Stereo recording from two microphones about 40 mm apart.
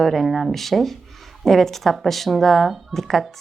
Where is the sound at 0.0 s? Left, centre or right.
Centre.